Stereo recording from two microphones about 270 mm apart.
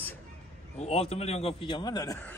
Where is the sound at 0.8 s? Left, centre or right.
Left.